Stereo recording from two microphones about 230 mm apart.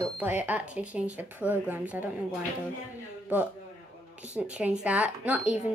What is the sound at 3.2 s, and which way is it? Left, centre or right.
Speech, centre.